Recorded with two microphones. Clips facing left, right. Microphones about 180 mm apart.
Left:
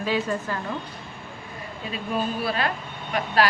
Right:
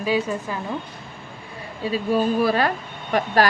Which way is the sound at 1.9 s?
40° right (ahead or behind).